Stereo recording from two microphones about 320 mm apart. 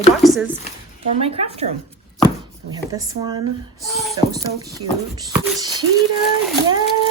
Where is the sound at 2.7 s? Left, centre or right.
Centre.